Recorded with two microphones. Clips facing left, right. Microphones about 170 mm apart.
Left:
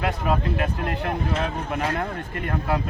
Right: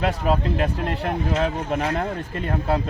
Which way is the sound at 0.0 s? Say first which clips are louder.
Right 2 dB; 30° right (ahead or behind).